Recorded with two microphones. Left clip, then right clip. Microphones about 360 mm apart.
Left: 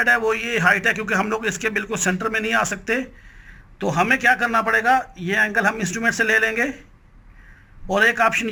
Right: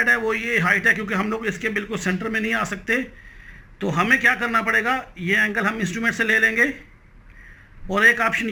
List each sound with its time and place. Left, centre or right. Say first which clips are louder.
0.0 s a man's voice: left 1 dB; left
7.9 s a man's voice: even; left